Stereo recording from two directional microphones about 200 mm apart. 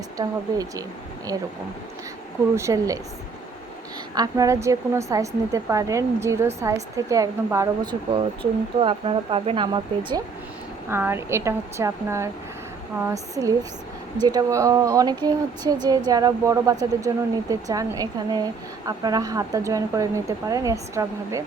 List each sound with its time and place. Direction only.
0.2 s a woman's voice: 15° right (ahead or behind)
2.6 s a woman's voice: 15° right (ahead or behind)
4.1 s a woman's voice: 20° right (ahead or behind)
10.8 s a woman's voice: 10° right (ahead or behind)